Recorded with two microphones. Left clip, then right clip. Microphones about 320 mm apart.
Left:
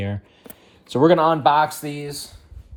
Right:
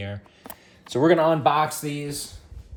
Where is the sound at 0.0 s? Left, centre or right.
Centre.